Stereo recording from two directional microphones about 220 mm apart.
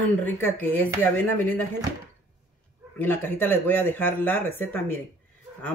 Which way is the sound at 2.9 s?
10° left (ahead or behind).